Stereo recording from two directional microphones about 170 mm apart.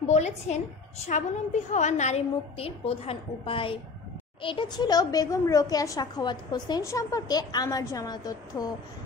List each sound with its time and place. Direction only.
0.0 s a woman's voice: 40° left (ahead or behind); by 8.6 s 20° left (ahead or behind)